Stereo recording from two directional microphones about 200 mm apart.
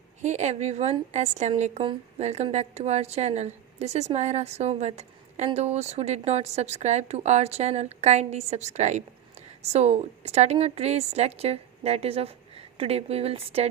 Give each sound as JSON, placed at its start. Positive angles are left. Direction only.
{"t": 0.2, "sound": "a woman's voice", "side_deg": -35}